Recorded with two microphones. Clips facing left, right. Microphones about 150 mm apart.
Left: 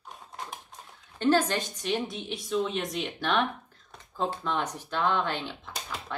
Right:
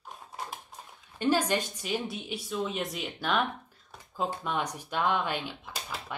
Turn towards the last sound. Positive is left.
turn(degrees=-10)  # may be behind; listen again after turning